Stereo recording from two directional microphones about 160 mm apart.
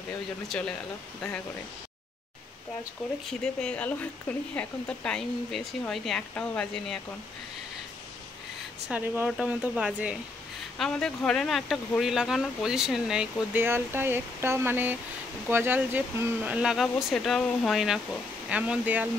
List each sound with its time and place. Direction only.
0.5 s speech: 5° left (ahead or behind)
3.3 s speech: 5° left (ahead or behind)
8.8 s speech: 10° right (ahead or behind)
10.8 s speech: 5° left (ahead or behind)